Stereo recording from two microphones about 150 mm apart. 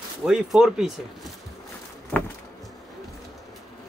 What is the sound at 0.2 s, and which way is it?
Speech, 5° right (ahead or behind).